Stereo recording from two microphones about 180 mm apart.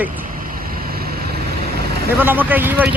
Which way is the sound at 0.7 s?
55° right (ahead or behind).